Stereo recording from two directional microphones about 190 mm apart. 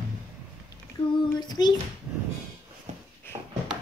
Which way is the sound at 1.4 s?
20° left (ahead or behind).